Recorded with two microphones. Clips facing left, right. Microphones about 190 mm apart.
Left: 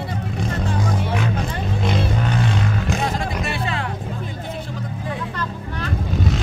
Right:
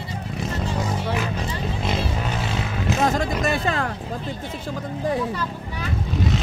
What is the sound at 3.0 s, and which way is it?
Music, 45° right (ahead or behind).